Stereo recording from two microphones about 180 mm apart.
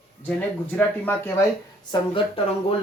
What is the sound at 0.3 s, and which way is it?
Speech, 10° left (ahead or behind).